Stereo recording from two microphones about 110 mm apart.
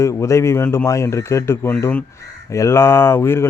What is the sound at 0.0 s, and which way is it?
Speech, 25° left (ahead or behind).